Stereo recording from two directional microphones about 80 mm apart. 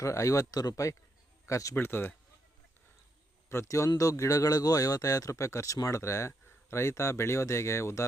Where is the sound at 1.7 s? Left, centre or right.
Left.